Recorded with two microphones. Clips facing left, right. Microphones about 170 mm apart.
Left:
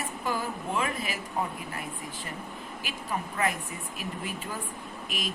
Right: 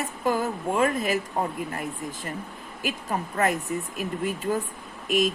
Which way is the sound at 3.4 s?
45° right (ahead or behind).